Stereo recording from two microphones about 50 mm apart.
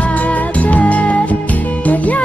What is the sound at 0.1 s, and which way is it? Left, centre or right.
Music, left.